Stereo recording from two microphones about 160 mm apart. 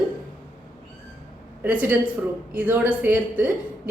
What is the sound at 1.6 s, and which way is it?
Speech, 10° right (ahead or behind).